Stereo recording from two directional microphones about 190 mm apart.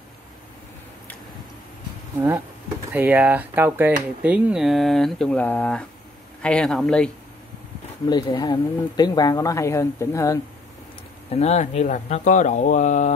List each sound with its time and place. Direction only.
2.9 s speech: 10° right (ahead or behind)
8.1 s speech: 25° left (ahead or behind)
11.2 s speech: 35° left (ahead or behind)